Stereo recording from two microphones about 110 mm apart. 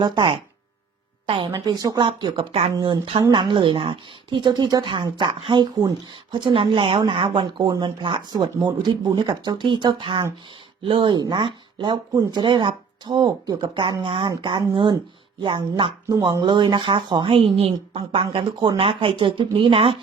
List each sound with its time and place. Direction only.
0.0 s speech: 45° right (ahead or behind)
1.5 s speech: 35° right (ahead or behind); by 2.6 s 55° right (ahead or behind)
2.7 s speech: 45° right (ahead or behind)
16.0 s speech: 30° right (ahead or behind)
16.4 s speech: 45° right (ahead or behind)